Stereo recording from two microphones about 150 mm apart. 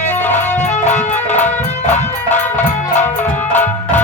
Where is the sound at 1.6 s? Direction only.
50° left (ahead or behind).